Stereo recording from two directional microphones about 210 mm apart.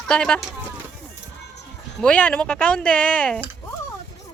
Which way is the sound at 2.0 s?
5° left (ahead or behind).